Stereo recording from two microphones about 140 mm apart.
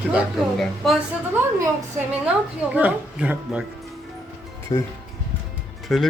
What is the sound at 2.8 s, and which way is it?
Speech, 10° right (ahead or behind).